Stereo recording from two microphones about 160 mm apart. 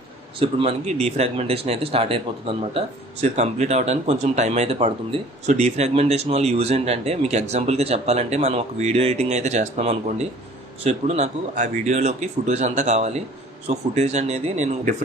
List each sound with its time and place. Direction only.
0.4 s speech: 40° right (ahead or behind)